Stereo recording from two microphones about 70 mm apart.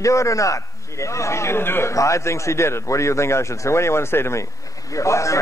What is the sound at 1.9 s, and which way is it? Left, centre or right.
A man's voice, left.